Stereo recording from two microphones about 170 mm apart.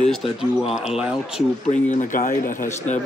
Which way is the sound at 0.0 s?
Centre (ahead or behind).